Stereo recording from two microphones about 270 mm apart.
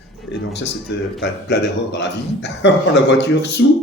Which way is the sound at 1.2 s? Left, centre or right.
Left.